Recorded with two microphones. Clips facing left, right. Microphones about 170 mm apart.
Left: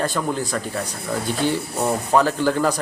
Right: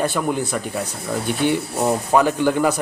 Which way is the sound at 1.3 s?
60° right (ahead or behind).